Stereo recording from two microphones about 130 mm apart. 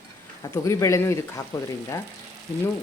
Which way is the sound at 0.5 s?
25° left (ahead or behind).